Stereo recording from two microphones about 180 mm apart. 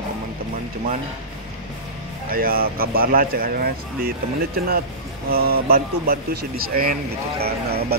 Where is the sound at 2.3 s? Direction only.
55° right (ahead or behind).